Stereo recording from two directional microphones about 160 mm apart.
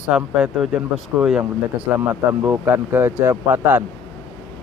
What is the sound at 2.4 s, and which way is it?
Speech, 15° right (ahead or behind).